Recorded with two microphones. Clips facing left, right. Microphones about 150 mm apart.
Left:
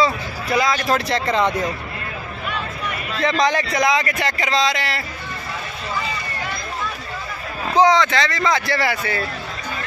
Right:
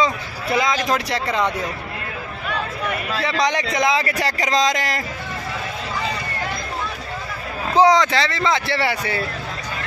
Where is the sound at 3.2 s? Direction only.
15° right (ahead or behind); by 5.0 s 45° right (ahead or behind).